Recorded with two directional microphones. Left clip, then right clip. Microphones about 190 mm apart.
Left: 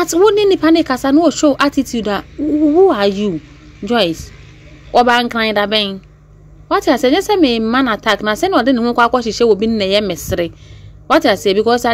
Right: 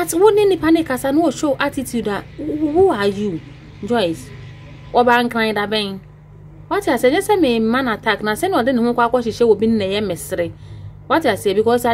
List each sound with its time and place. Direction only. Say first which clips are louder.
0.0 s a woman's voice: left 2 dB; 10° left (ahead or behind)